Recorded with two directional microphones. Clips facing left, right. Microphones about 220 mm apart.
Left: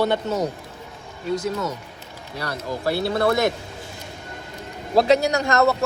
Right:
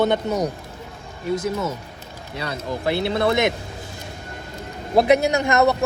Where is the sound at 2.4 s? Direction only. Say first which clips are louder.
Right 1 dB; 20° right (ahead or behind).